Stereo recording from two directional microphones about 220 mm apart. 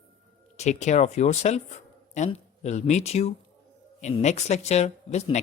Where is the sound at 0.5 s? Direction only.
30° left (ahead or behind).